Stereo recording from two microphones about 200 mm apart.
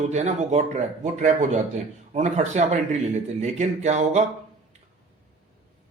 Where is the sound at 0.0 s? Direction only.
35° right (ahead or behind).